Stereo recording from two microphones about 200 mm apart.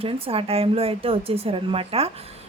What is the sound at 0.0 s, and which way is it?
Speech, 30° right (ahead or behind).